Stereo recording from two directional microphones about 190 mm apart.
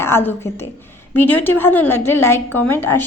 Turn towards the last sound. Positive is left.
turn(degrees=10)  # may be behind; listen again after turning